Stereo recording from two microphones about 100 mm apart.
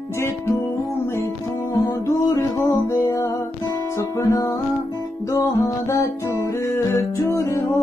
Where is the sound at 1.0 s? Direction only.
25° left (ahead or behind).